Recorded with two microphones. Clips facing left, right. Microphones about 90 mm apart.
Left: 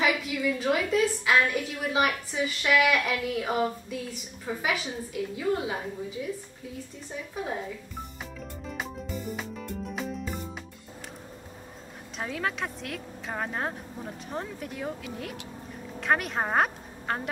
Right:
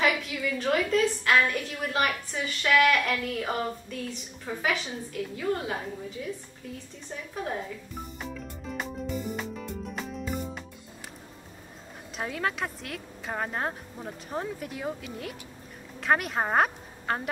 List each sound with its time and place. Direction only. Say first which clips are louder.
0.0 s a woman's voice: left 1 dB; 5° left (ahead or behind)
8.2 s music: right 2 dB; centre (ahead or behind)
12.2 s a woman's voice: right 1 dB; centre (ahead or behind)